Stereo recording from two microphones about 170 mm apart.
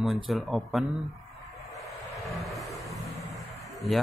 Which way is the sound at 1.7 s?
Centre (ahead or behind).